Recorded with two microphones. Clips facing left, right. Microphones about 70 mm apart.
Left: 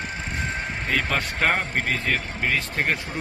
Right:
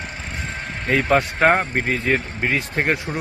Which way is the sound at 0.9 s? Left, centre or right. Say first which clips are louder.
Right 8 dB; right.